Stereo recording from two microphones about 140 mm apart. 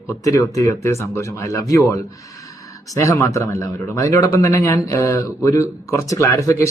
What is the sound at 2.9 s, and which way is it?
Speech, 20° left (ahead or behind).